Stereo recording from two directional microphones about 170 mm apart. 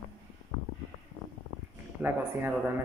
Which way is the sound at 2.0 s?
10° right (ahead or behind).